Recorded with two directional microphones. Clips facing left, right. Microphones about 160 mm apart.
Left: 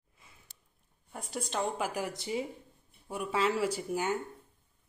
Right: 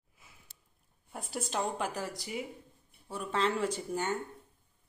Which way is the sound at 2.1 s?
25° left (ahead or behind).